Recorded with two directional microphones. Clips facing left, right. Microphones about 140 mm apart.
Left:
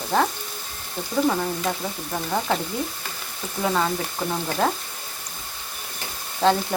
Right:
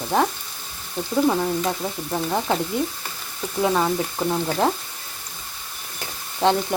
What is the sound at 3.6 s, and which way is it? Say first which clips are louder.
Speech: right 2 dB; 15° right (ahead or behind).